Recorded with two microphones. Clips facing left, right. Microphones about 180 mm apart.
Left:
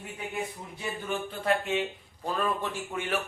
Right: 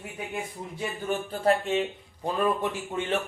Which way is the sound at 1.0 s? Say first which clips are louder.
Right 4 dB; 35° right (ahead or behind).